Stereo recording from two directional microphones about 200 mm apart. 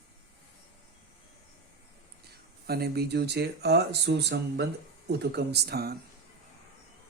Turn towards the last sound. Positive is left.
turn(degrees=-50)  # may be behind; listen again after turning